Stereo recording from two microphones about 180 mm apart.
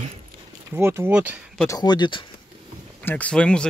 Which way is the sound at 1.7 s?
20° left (ahead or behind).